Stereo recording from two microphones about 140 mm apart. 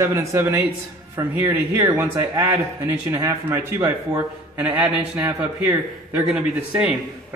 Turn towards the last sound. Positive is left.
turn(degrees=-10)  # may be behind; listen again after turning